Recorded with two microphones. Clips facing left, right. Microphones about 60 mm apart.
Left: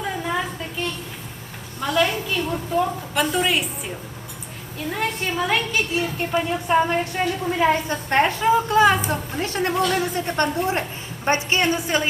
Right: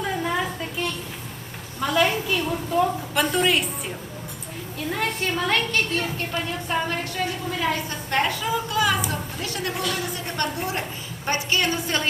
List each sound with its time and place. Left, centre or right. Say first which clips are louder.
0.0 s a sound: even; centre
1.8 s a woman's voice: even; centre
4.9 s a woman's voice: left 1 dB; centre